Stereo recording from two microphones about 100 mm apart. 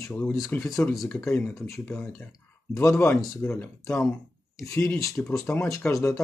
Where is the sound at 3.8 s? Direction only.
30° left (ahead or behind).